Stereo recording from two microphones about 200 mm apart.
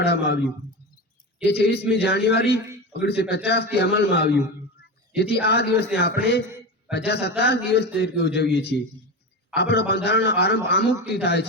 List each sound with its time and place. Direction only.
0.0 s a man's voice: 55° left (ahead or behind)
1.5 s a man's voice: 55° left (ahead or behind)
6.4 s a sound: 10° right (ahead or behind)
6.9 s a man's voice: 55° left (ahead or behind)